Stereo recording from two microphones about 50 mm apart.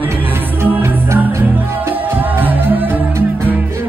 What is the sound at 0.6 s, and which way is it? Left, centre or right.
Music, right.